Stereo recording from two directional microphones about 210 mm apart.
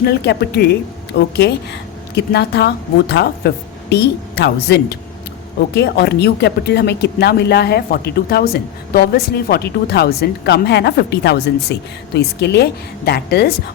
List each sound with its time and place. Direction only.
0.0 s speech: 50° left (ahead or behind)